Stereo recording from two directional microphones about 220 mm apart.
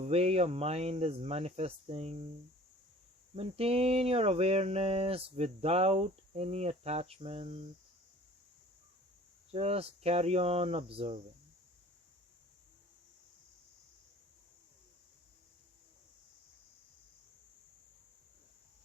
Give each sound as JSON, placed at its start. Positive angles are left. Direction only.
{"t": 0.0, "sound": "speech", "side_deg": -30}
{"t": 3.3, "sound": "speech", "side_deg": -25}
{"t": 9.5, "sound": "speech", "side_deg": -25}